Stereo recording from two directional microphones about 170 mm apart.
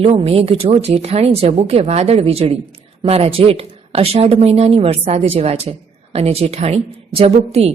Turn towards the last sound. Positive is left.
turn(degrees=-35)  # may be behind; listen again after turning